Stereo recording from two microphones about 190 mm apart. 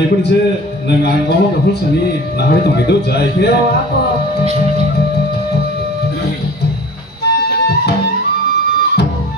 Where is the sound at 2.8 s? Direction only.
60° left (ahead or behind).